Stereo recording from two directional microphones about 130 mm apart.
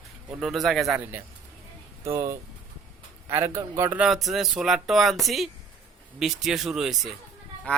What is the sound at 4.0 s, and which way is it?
A man's voice, centre (ahead or behind).